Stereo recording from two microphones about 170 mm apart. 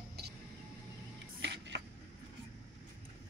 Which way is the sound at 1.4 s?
90° right.